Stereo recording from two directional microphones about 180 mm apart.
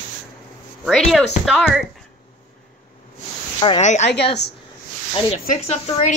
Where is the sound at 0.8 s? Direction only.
Centre (ahead or behind).